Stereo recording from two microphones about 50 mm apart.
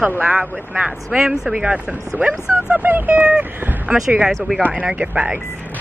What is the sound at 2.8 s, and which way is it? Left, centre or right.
Speech, right.